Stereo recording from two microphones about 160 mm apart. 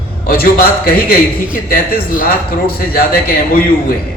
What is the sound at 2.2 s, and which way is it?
A man's voice, 70° left (ahead or behind).